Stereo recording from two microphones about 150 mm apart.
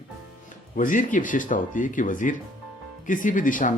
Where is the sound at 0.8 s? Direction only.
60° left (ahead or behind).